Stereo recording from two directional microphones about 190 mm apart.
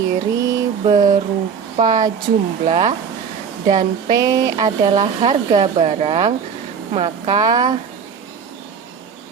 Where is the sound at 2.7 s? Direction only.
35° right (ahead or behind).